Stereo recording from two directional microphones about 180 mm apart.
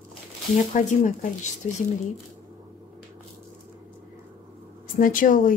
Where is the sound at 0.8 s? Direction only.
40° left (ahead or behind).